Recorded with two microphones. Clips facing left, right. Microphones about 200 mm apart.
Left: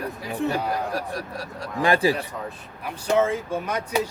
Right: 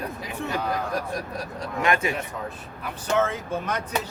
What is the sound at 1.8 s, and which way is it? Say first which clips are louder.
Speech: left 4 dB; 30° left (ahead or behind).